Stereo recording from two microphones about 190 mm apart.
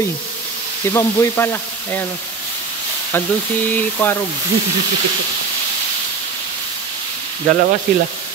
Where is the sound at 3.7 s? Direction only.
10° left (ahead or behind).